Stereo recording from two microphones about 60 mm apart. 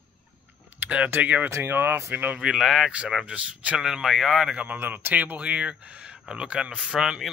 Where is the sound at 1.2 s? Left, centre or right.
Right.